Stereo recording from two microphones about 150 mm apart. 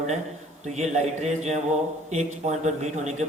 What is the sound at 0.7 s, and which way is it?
A man's voice, 50° right (ahead or behind).